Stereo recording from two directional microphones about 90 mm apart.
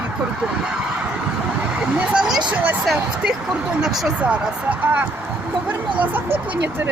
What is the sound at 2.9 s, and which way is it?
Speech, 5° right (ahead or behind).